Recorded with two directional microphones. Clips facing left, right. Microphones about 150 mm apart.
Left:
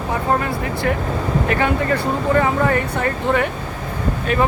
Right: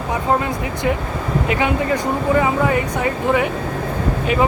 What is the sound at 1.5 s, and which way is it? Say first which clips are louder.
Speech: right 1 dB; 15° right (ahead or behind).